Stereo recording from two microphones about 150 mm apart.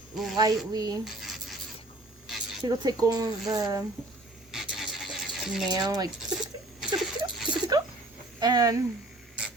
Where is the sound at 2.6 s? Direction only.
25° right (ahead or behind).